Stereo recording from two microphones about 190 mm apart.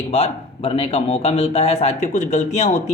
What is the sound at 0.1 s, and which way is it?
Speech, 30° left (ahead or behind).